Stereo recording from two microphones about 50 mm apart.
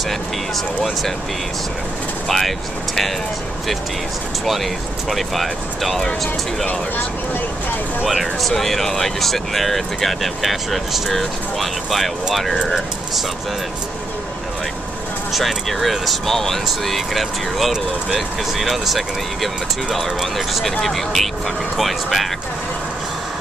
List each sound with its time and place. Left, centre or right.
2.2 s speech: centre
5.1 s speech: centre
8.1 s speech: centre
15.3 s speech: centre